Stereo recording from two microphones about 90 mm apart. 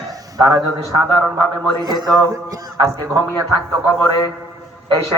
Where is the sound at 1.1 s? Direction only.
15° left (ahead or behind).